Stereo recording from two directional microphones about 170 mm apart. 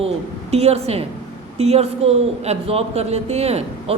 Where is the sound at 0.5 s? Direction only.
35° right (ahead or behind).